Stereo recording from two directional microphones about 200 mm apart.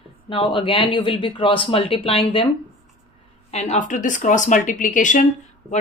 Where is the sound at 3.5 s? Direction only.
35° left (ahead or behind).